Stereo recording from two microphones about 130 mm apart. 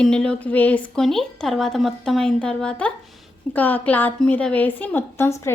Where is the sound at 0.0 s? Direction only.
5° left (ahead or behind).